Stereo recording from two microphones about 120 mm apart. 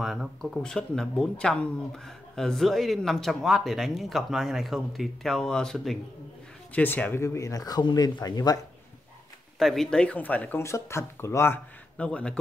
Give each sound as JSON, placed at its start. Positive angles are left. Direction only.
{"t": 0.0, "sound": "speech", "side_deg": 0}
{"t": 9.6, "sound": "speech", "side_deg": 5}